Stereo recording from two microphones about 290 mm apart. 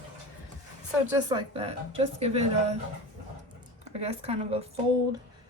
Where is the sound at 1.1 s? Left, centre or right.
Centre.